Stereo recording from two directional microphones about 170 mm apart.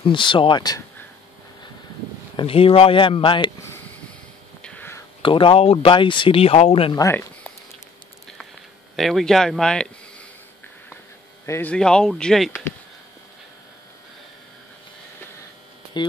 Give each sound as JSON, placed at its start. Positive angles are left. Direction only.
{"t": 0.0, "sound": "speech", "side_deg": 30}
{"t": 2.3, "sound": "speech", "side_deg": 35}
{"t": 4.6, "sound": "whispering", "side_deg": 5}
{"t": 5.2, "sound": "speech", "side_deg": 30}
{"t": 7.0, "sound": "speech", "side_deg": 15}
{"t": 8.9, "sound": "speech", "side_deg": 0}
{"t": 11.4, "sound": "speech", "side_deg": 10}
{"t": 16.0, "sound": "speech", "side_deg": 25}